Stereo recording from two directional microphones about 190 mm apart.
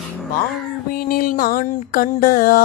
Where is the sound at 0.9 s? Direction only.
45° left (ahead or behind).